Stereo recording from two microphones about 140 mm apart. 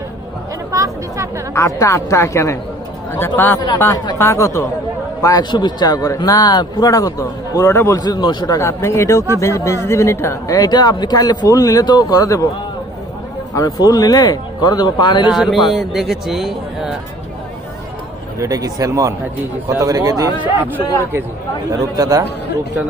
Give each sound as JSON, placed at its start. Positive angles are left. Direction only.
{"t": 0.7, "sound": "speech", "side_deg": -25}
{"t": 1.5, "sound": "a man's voice", "side_deg": 20}
{"t": 8.6, "sound": "a man's voice", "side_deg": 20}
{"t": 13.5, "sound": "a man's voice", "side_deg": 25}
{"t": 15.3, "sound": "speech", "side_deg": -5}
{"t": 18.3, "sound": "speech", "side_deg": -25}
{"t": 21.7, "sound": "speech", "side_deg": -25}